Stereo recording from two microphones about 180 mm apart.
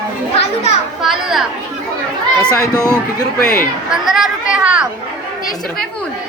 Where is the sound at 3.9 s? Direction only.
Centre (ahead or behind).